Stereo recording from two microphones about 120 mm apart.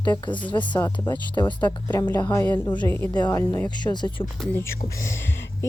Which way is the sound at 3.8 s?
35° left (ahead or behind).